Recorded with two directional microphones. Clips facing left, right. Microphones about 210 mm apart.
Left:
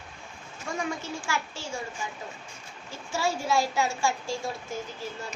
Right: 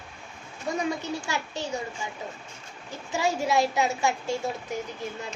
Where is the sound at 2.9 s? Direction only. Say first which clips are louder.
Right 2 dB; 15° right (ahead or behind).